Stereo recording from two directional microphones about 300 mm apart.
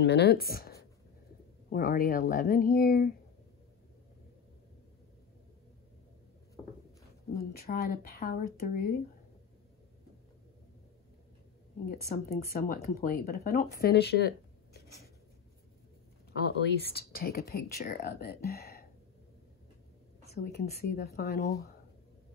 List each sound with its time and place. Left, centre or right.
0.0 s speech: left
7.3 s speech: left
12.1 s speech: left
16.3 s speech: left
20.4 s speech: left